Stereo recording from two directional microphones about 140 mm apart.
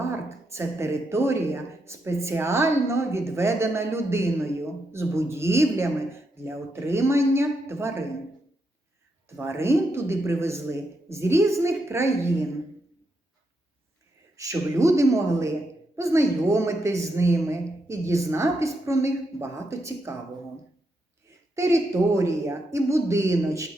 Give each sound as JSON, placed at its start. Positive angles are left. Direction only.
{"t": 0.0, "sound": "speech", "side_deg": -20}
{"t": 9.3, "sound": "speech", "side_deg": -20}
{"t": 14.3, "sound": "speech", "side_deg": -20}
{"t": 21.5, "sound": "speech", "side_deg": -20}